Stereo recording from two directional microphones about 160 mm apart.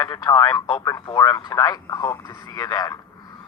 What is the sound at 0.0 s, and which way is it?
Speech, 20° left (ahead or behind).